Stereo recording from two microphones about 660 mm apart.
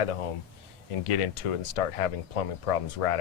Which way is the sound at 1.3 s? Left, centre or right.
Left.